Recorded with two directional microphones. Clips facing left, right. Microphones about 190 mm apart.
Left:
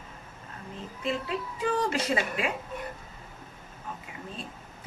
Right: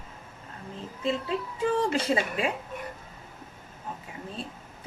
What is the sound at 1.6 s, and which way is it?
Speech, 30° right (ahead or behind).